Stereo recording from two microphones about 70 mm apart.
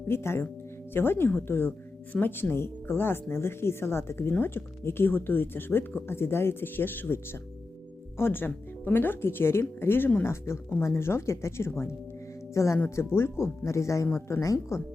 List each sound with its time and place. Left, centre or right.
0.1 s speech: left
8.2 s speech: left
12.8 s speech: left
14.1 s speech: left
14.4 s speech: left